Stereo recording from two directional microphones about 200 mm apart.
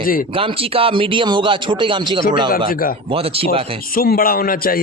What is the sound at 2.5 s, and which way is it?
Speech, 50° left (ahead or behind).